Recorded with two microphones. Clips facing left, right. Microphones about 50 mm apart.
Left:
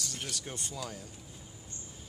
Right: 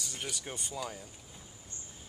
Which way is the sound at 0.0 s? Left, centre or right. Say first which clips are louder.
Even; centre.